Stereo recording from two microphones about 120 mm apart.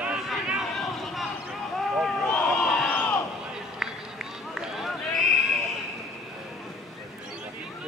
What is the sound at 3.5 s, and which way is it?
Run, 5° right (ahead or behind).